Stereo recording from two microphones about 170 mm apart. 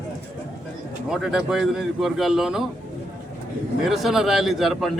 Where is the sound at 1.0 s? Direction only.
5° right (ahead or behind).